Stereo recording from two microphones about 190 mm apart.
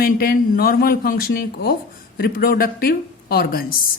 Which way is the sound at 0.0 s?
50° left (ahead or behind).